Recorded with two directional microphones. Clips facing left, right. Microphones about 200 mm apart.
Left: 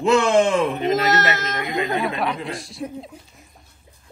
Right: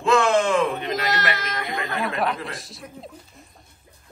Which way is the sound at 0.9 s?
50° left (ahead or behind).